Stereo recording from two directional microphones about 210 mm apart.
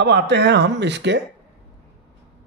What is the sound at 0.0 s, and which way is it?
Speech, 55° right (ahead or behind).